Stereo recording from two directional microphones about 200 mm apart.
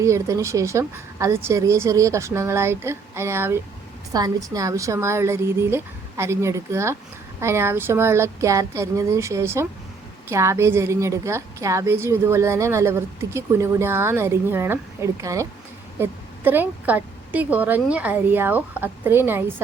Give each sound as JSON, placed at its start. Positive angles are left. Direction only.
{"t": 0.0, "sound": "a woman's voice", "side_deg": -15}